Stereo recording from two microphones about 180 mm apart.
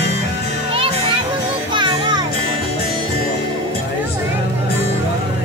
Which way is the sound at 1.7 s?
25° right (ahead or behind).